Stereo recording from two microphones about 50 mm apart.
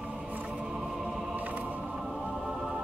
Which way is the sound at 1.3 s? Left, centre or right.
Right.